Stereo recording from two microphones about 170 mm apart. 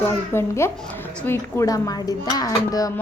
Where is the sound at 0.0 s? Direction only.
15° left (ahead or behind).